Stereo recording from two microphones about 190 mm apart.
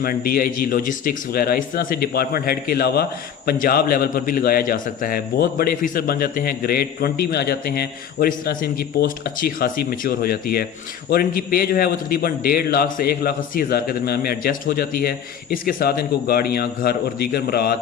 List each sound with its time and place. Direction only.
0.0 s a man's voice: 50° left (ahead or behind)